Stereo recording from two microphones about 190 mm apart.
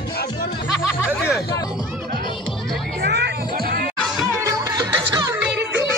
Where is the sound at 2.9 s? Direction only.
60° right (ahead or behind).